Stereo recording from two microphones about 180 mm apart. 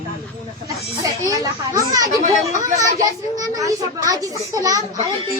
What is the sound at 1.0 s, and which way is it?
Speech, 20° right (ahead or behind).